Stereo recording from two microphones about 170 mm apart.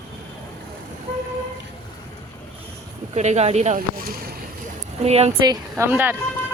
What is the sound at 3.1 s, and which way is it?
Speech, 40° right (ahead or behind).